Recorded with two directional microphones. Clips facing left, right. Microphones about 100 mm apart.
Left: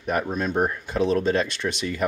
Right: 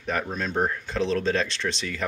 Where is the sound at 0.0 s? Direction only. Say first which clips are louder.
Left 3 dB; 15° left (ahead or behind).